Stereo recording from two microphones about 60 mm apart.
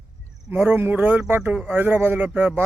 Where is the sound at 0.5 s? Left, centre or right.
Right.